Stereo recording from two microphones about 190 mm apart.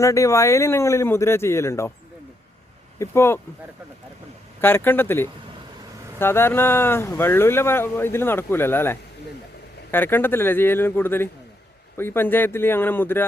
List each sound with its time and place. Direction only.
0.0 s speech: 15° left (ahead or behind)
3.0 s speech: 15° left (ahead or behind)
4.6 s speech: 10° left (ahead or behind)